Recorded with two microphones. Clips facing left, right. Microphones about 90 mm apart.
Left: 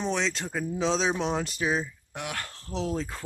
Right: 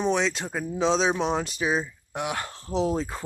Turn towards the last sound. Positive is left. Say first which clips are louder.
# right 5 dB
turn(degrees=-15)  # may be behind; listen again after turning